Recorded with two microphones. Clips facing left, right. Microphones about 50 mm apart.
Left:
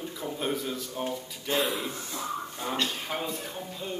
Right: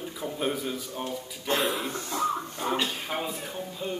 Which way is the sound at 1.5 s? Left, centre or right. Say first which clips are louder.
Right 1 dB; right.